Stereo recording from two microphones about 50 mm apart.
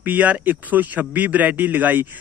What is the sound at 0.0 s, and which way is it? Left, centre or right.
A man's voice, right.